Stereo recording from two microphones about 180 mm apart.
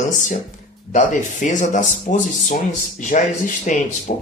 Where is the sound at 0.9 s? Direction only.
45° left (ahead or behind).